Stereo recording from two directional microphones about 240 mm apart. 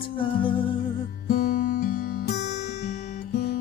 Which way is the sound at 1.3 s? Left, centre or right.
Left.